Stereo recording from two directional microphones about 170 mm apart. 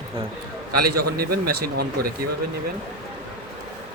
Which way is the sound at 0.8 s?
65° right (ahead or behind).